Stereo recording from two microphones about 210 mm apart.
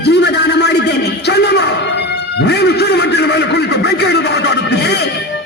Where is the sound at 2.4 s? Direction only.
55° left (ahead or behind).